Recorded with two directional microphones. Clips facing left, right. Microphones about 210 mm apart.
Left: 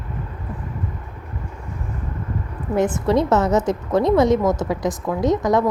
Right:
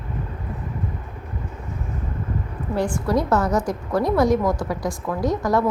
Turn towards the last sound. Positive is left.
turn(degrees=20)  # may be behind; listen again after turning